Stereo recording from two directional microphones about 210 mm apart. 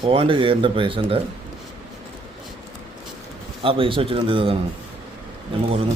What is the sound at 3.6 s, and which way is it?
Speech, 25° right (ahead or behind).